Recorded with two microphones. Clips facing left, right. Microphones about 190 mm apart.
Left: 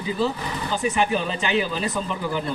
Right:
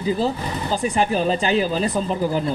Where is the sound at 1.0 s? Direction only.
35° right (ahead or behind).